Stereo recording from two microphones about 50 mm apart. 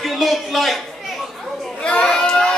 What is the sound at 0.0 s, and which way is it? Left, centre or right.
Speech, centre.